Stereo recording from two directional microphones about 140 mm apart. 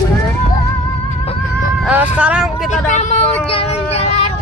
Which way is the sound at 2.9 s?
55° left (ahead or behind).